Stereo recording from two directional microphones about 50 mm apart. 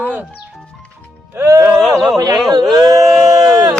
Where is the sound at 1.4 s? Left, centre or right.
Right.